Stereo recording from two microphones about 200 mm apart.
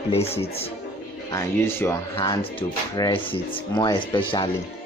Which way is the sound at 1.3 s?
15° left (ahead or behind).